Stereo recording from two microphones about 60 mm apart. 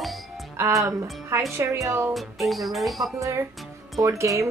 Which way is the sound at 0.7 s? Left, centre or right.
Right.